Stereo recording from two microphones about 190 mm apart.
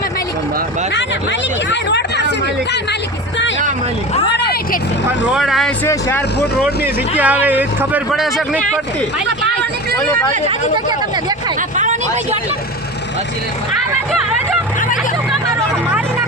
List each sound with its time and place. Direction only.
1.7 s a sound: 65° left (ahead or behind)
4.4 s speech: 60° left (ahead or behind)
5.3 s speech: centre (ahead or behind)
5.8 s speech: 10° left (ahead or behind)
7.2 s speech: 10° right (ahead or behind)
11.8 s speech: 40° right (ahead or behind)